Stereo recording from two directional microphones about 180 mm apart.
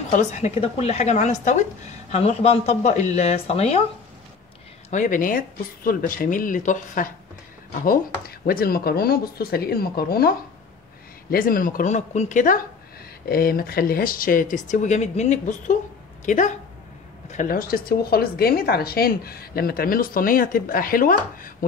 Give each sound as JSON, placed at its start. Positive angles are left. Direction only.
{"t": 0.1, "sound": "speech", "side_deg": 40}
{"t": 4.9, "sound": "speech", "side_deg": 45}
{"t": 13.3, "sound": "speech", "side_deg": 55}